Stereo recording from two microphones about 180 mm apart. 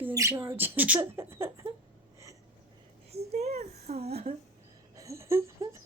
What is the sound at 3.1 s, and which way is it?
A child's voice, 35° right (ahead or behind).